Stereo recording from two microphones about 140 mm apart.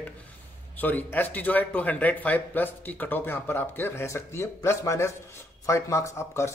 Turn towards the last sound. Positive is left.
turn(degrees=20)  # may be behind; listen again after turning